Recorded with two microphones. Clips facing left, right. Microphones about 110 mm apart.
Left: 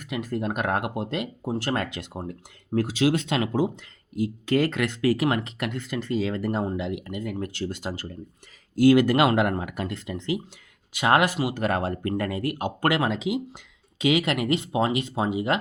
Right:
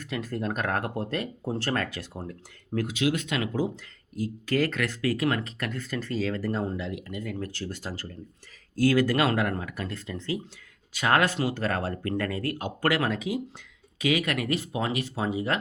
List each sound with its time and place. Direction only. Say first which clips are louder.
0.0 s speech: left 2 dB; 15° left (ahead or behind)
2.7 s speech: left 4 dB; 30° left (ahead or behind)